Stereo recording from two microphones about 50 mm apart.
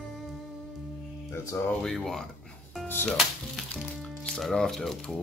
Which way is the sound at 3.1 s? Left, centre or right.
Centre.